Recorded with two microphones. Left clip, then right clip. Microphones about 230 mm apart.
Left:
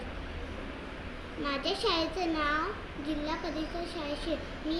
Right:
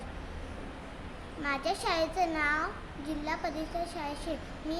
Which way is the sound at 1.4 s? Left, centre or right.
Centre.